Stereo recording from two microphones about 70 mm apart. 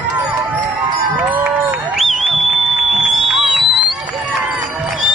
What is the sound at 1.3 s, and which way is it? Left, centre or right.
Run, right.